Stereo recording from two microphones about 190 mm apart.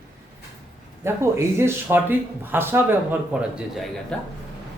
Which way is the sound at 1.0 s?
15° right (ahead or behind).